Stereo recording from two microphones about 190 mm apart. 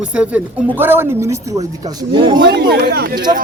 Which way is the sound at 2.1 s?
25° right (ahead or behind).